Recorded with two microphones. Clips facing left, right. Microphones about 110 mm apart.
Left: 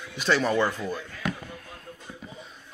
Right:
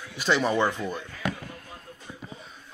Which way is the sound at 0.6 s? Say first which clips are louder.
Even; 20° right (ahead or behind).